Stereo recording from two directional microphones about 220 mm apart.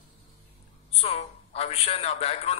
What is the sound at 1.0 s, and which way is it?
A man's voice, 30° left (ahead or behind).